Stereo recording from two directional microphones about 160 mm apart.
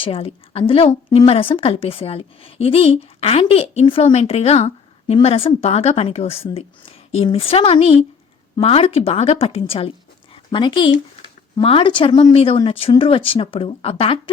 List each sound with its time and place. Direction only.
0.0 s a woman's voice: 35° left (ahead or behind)